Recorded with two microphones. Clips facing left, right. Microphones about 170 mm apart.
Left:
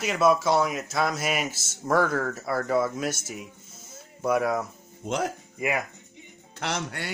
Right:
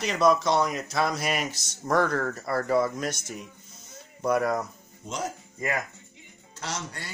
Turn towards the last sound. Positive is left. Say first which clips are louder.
# left 5 dB
turn(degrees=70)  # may be behind; listen again after turning